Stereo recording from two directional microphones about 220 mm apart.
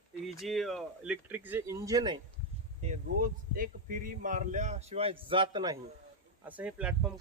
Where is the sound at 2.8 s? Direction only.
35° right (ahead or behind).